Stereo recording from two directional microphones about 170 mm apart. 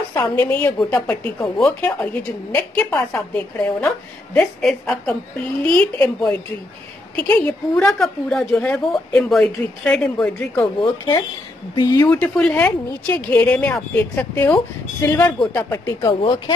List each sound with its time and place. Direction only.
0.1 s a woman's voice: 15° left (ahead or behind)
10.8 s speech: 20° left (ahead or behind)
12.1 s speech: 5° left (ahead or behind)
16.0 s speech: 30° left (ahead or behind)